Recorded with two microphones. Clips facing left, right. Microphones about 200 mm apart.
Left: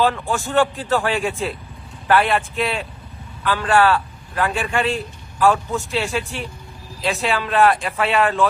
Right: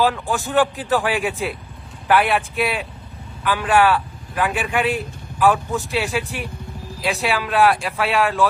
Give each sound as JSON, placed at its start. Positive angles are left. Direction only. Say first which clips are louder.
{"t": 0.0, "sound": "a man's voice", "louder": "even", "side_deg": -5}
{"t": 7.2, "sound": "speech", "louder": "left 1 dB", "side_deg": 0}